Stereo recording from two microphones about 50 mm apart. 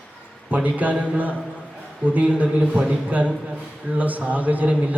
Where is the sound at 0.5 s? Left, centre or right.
Right.